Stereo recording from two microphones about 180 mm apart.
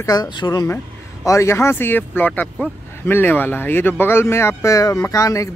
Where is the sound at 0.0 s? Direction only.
20° left (ahead or behind).